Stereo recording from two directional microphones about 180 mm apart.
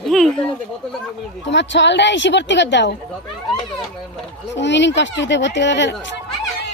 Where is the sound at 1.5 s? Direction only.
80° left.